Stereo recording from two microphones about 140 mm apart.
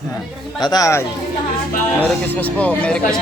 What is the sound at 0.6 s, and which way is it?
Speech, 25° left (ahead or behind).